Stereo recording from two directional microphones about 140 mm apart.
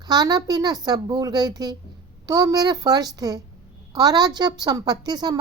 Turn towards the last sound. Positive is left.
turn(degrees=-30)  # may be behind; listen again after turning